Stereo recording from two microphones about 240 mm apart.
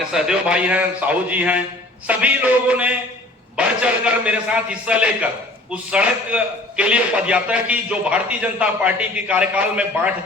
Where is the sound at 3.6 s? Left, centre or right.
Centre.